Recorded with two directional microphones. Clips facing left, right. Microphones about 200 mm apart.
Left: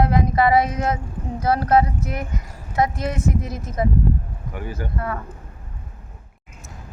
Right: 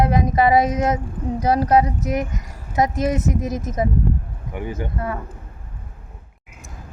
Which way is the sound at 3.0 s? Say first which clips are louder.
Right 3 dB; 20° right (ahead or behind).